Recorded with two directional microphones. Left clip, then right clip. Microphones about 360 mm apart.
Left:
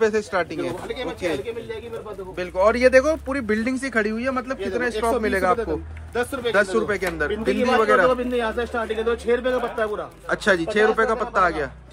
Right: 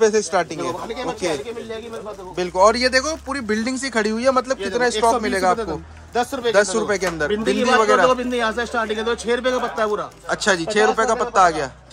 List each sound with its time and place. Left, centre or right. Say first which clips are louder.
0.0 s speech: right 4 dB; centre
2.3 s speech: right 4 dB; centre
6.1 s a man's voice: right 3 dB; centre
6.5 s speech: right 3 dB; centre
8.1 s a man's voice: right 3 dB; right
10.2 s speech: even; centre